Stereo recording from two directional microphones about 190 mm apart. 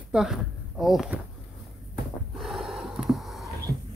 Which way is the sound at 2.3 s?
Centre (ahead or behind).